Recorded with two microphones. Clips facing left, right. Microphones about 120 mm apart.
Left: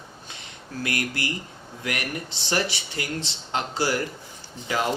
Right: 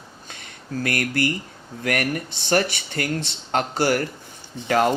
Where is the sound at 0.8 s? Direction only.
50° right (ahead or behind).